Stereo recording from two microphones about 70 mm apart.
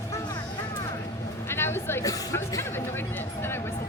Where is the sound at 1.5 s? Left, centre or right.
Left.